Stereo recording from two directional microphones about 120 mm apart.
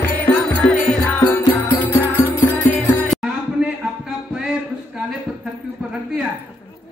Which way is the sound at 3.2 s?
5° right (ahead or behind).